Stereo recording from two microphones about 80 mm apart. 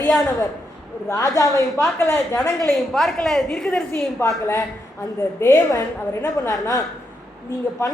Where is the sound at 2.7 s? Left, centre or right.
Centre.